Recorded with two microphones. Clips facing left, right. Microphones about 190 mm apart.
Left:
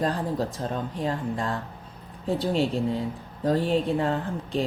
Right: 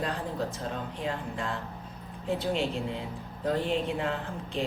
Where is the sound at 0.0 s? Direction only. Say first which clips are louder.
Left 5 dB; 35° left (ahead or behind).